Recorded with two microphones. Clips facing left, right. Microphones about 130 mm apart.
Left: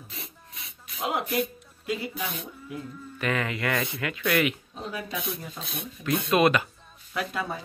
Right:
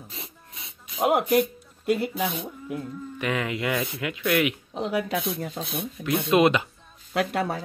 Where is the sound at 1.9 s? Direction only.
60° right (ahead or behind).